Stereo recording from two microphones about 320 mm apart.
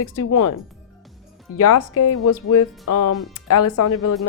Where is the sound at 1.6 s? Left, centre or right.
Left.